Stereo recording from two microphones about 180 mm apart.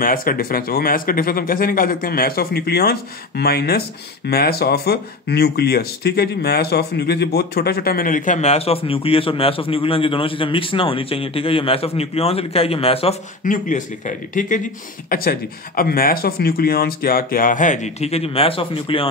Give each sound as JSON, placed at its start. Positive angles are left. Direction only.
{"t": 0.0, "sound": "speech", "side_deg": 50}
{"t": 13.4, "sound": "speech", "side_deg": 45}